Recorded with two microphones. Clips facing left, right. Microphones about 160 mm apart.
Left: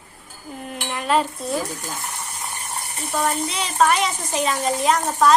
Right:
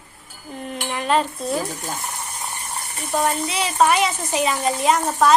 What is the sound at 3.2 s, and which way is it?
A woman's voice, 5° right (ahead or behind).